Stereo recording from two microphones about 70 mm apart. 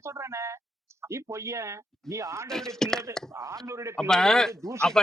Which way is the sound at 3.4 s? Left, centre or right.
Right.